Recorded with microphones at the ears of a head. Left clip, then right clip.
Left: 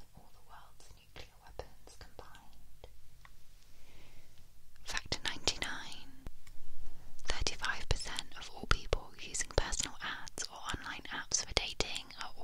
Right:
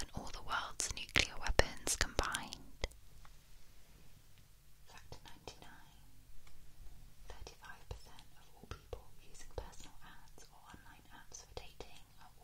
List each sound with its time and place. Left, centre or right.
0.0 s whispering: right
4.8 s whispering: left